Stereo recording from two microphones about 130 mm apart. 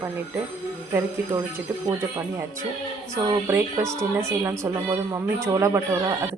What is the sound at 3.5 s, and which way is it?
Speech, 25° right (ahead or behind).